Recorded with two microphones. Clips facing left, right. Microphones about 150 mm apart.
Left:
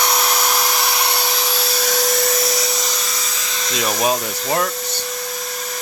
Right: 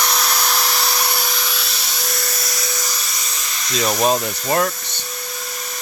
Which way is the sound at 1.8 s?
75° left (ahead or behind).